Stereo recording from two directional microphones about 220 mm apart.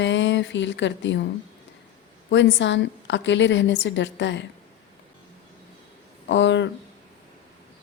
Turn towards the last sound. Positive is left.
turn(degrees=55)  # may be behind; listen again after turning